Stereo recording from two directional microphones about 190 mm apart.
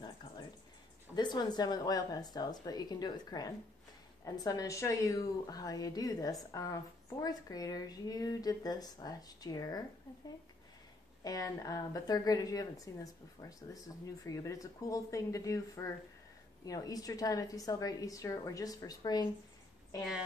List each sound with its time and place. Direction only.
1.1 s speech: 20° left (ahead or behind)
11.2 s speech: 20° left (ahead or behind)
20.0 s a woman's voice: 5° right (ahead or behind)